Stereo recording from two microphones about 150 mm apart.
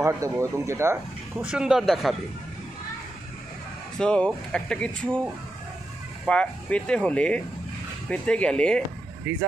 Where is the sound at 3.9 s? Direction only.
5° left (ahead or behind).